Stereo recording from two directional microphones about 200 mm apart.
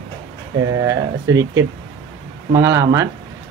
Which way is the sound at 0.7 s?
15° right (ahead or behind).